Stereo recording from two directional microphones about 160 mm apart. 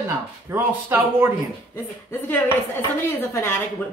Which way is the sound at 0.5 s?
15° right (ahead or behind).